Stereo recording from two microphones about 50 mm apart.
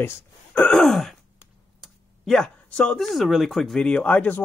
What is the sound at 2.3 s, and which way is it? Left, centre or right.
Speech, centre.